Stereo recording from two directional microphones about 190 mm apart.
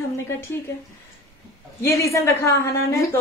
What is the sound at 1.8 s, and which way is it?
Speech, 15° left (ahead or behind).